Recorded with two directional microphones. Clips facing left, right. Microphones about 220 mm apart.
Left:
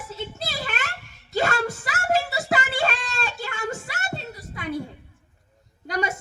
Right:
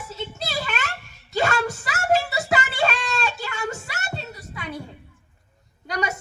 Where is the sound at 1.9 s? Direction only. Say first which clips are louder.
Right 3 dB; 40° left (ahead or behind).